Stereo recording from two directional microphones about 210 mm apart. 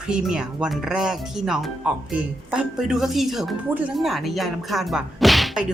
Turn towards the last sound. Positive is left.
turn(degrees=0)  # may be behind; listen again after turning